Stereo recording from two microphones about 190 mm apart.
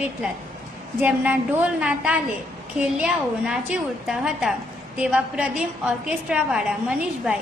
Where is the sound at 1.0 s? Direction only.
10° right (ahead or behind).